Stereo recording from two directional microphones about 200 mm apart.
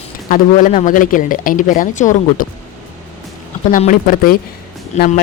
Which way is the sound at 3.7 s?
40° left (ahead or behind).